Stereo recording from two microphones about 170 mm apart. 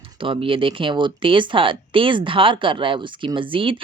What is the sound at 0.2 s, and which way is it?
Speech, 30° right (ahead or behind).